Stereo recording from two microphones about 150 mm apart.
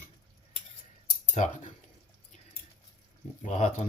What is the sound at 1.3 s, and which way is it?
Speech, 55° left (ahead or behind).